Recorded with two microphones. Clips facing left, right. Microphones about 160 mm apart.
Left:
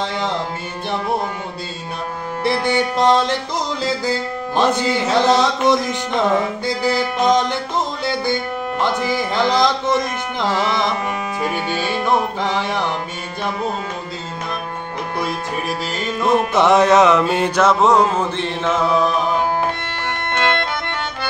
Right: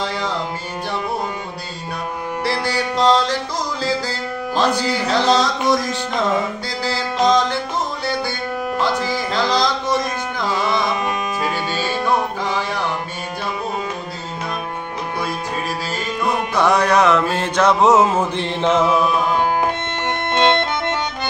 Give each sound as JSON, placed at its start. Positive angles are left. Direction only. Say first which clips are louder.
{"t": 2.4, "sound": "music", "louder": "left 4 dB", "side_deg": 20}
{"t": 11.4, "sound": "music", "louder": "left 3 dB", "side_deg": 15}
{"t": 16.5, "sound": "music", "louder": "left 2 dB", "side_deg": 20}
{"t": 17.6, "sound": "a sound", "louder": "right 1 dB", "side_deg": 0}
{"t": 18.6, "sound": "chant", "louder": "right 2 dB", "side_deg": -20}
{"t": 20.3, "sound": "music", "louder": "right 3 dB", "side_deg": -20}